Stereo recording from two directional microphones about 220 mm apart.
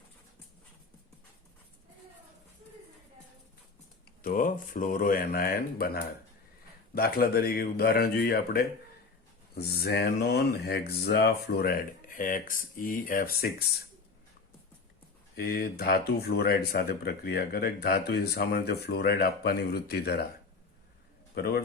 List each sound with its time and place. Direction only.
4.2 s speech: 40° left (ahead or behind)
15.4 s speech: 45° left (ahead or behind)
21.3 s a man's voice: 45° left (ahead or behind)